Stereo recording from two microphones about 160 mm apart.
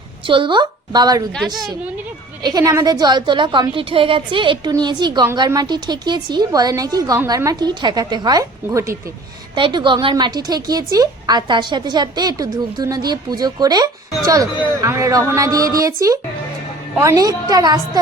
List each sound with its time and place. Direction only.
0.3 s a woman's voice: 30° right (ahead or behind)
1.4 s a woman's voice: centre (ahead or behind)
2.4 s a woman's voice: 25° right (ahead or behind)